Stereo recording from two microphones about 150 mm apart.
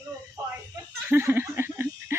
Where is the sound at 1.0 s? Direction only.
15° right (ahead or behind).